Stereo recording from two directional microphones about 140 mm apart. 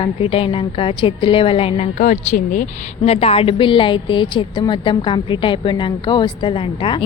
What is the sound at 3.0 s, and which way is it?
A woman's voice, 45° left (ahead or behind).